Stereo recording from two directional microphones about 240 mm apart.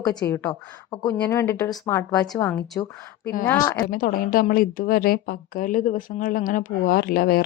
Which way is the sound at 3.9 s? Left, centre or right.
Left.